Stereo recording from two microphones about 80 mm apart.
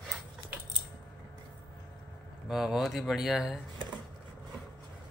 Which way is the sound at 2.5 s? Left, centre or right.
Centre.